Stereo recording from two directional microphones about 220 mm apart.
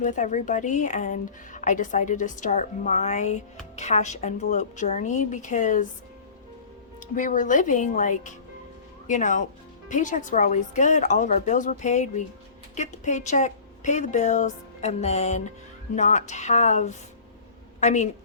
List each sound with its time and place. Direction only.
0.0 s speech: 35° left (ahead or behind)
7.2 s a woman's voice: 35° left (ahead or behind)